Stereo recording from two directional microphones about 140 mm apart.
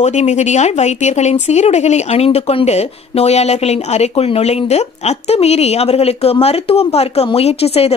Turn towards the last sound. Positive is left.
turn(degrees=45)  # may be behind; listen again after turning